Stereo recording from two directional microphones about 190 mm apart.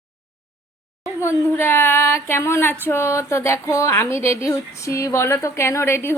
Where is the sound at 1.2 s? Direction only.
15° left (ahead or behind).